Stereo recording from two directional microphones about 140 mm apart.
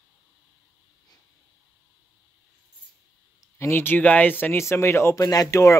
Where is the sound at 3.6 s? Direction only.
15° left (ahead or behind).